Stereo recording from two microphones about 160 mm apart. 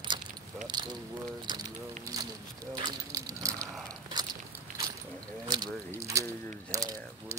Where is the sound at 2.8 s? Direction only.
20° right (ahead or behind).